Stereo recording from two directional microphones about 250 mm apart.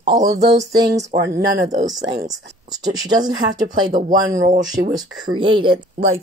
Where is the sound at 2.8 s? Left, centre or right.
Centre.